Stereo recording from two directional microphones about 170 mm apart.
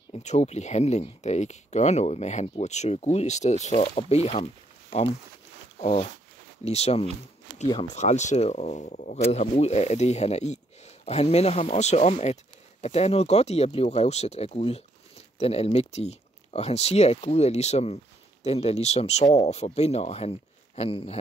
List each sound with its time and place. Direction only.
0.1 s speech: 40° left (ahead or behind)
5.8 s speech: 40° left (ahead or behind)
7.6 s speech: 25° left (ahead or behind)
7.9 s speech: 45° left (ahead or behind)